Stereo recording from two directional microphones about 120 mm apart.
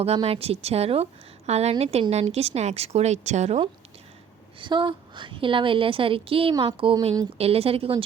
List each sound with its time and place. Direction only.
0.0 s a woman's voice: 55° right (ahead or behind)
4.6 s a woman's voice: 40° right (ahead or behind)
6.5 s speech: 40° right (ahead or behind)
7.3 s a woman's voice: 55° right (ahead or behind)